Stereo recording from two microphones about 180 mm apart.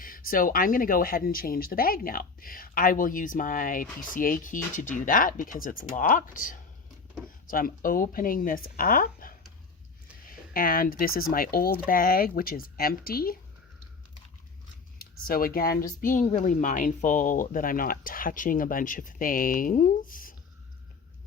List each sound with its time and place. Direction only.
0.0 s speech: 50° left (ahead or behind)
10.5 s speech: 55° left (ahead or behind)
14.9 s speech: 55° left (ahead or behind)